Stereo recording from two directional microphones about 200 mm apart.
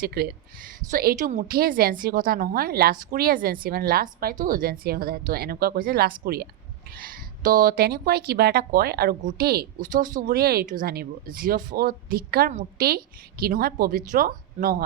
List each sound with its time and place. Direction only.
0.0 s a woman's voice: 50° right (ahead or behind)